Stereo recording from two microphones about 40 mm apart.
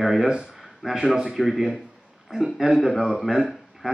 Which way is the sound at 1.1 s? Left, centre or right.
Right.